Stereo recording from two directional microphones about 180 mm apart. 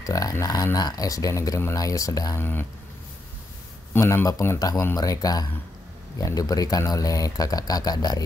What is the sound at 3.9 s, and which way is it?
Speech, 15° left (ahead or behind).